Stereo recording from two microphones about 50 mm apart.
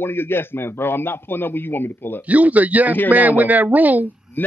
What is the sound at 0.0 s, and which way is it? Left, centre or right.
A man's voice, left.